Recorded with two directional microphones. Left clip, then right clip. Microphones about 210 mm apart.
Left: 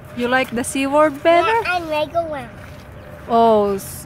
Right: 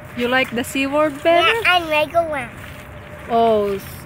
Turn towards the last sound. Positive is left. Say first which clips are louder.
# left 2 dB
turn(degrees=20)  # may be behind; listen again after turning